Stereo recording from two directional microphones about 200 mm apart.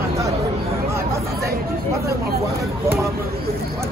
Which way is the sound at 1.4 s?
15° right (ahead or behind).